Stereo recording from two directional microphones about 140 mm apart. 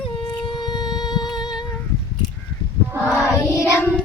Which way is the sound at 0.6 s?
30° left (ahead or behind).